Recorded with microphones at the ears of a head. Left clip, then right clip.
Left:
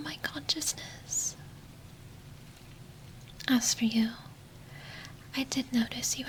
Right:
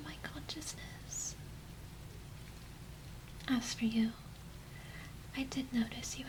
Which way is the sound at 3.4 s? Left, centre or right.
Left.